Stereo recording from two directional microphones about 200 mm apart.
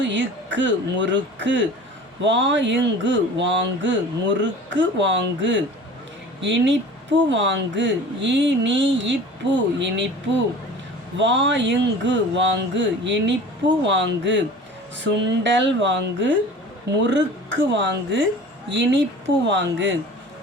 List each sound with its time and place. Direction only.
0.0 s speech: 65° right (ahead or behind)
11.2 s speech: 65° right (ahead or behind)